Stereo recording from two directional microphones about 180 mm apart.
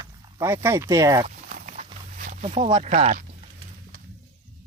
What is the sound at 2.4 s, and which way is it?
Speech, 30° right (ahead or behind).